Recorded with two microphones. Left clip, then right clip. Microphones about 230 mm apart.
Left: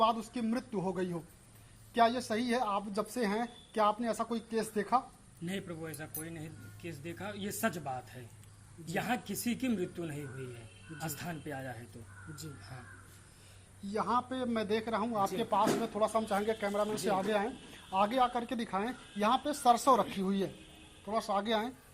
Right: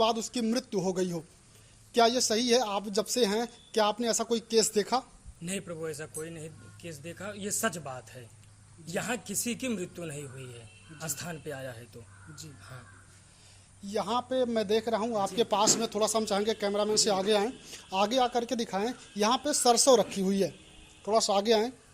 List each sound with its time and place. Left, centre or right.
0.0 s speech: right
13.9 s speech: right
21.0 s speech: right
21.4 s a woman's voice: right